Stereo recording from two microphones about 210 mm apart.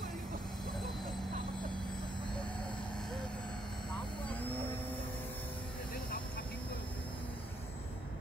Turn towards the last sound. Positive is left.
turn(degrees=45)  # may be behind; listen again after turning